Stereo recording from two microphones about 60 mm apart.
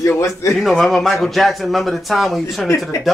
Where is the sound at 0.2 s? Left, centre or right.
Left.